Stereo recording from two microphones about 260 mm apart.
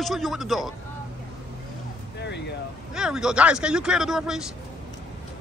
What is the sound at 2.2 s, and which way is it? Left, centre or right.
Vehicle, left.